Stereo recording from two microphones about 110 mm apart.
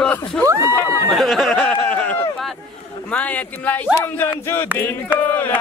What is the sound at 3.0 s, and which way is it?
Speech, 10° left (ahead or behind).